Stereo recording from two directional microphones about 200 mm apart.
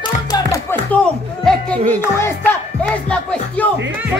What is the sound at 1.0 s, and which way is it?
Speech, 5° left (ahead or behind).